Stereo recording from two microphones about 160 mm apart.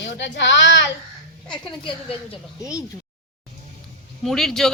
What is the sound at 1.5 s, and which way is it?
Speech, 30° left (ahead or behind).